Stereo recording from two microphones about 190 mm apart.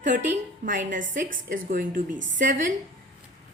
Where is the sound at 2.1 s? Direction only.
75° right (ahead or behind).